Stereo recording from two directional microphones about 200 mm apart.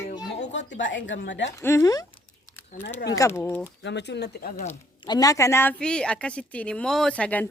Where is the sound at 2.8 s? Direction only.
60° left (ahead or behind).